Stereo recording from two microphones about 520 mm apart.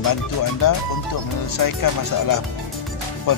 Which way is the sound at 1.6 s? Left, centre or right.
Left.